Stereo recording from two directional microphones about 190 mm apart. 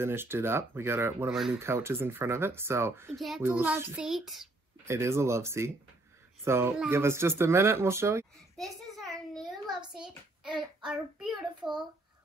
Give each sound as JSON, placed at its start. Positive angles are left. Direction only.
{"t": 0.0, "sound": "a child's voice", "side_deg": -10}
{"t": 1.3, "sound": "speech", "side_deg": 0}
{"t": 1.6, "sound": "a child's voice", "side_deg": -15}
{"t": 3.2, "sound": "speech", "side_deg": 0}
{"t": 3.4, "sound": "speech", "side_deg": -10}
{"t": 4.8, "sound": "a child's voice", "side_deg": -15}
{"t": 9.3, "sound": "child singing", "side_deg": 0}
{"t": 9.7, "sound": "hands", "side_deg": -25}
{"t": 10.0, "sound": "a child's voice", "side_deg": -5}